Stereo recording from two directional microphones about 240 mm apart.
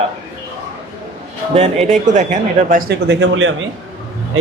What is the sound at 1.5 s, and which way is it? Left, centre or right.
Speech, right.